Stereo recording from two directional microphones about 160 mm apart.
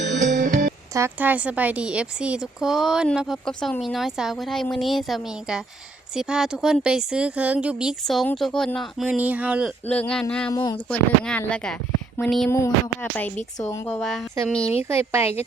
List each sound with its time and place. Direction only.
0.0 s music: 50° right (ahead or behind)
0.9 s speech: 15° right (ahead or behind)
9.8 s speech: 10° left (ahead or behind)
10.5 s speech: 25° left (ahead or behind)
10.8 s speech: 5° left (ahead or behind)
12.5 s speech: 15° left (ahead or behind)
13.8 s speech: 5° left (ahead or behind)
14.8 s speech: 15° right (ahead or behind)